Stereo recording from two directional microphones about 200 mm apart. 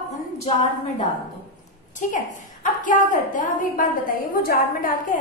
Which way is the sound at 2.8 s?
40° left (ahead or behind).